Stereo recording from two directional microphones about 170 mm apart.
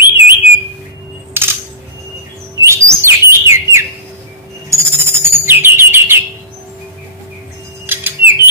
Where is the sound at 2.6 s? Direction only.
15° right (ahead or behind).